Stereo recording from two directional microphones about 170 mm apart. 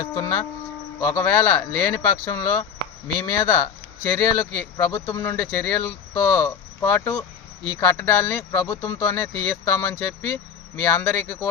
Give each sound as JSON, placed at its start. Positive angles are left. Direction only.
{"t": 0.0, "sound": "speech", "side_deg": 20}